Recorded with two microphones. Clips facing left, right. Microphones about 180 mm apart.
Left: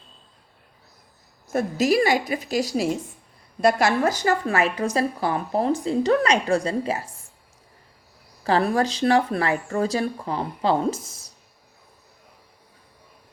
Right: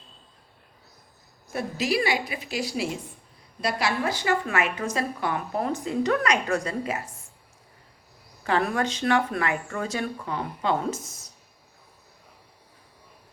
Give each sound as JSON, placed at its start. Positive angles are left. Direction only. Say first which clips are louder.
{"t": 1.5, "sound": "a woman's voice", "louder": "left 6 dB", "side_deg": 45}
{"t": 8.4, "sound": "a woman's voice", "louder": "left 4 dB", "side_deg": 35}